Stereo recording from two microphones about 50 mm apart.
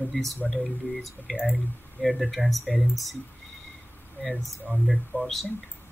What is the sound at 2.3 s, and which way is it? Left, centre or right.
Speech, centre.